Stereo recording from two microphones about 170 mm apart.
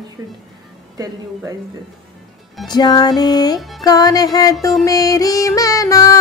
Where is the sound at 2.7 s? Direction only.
25° left (ahead or behind).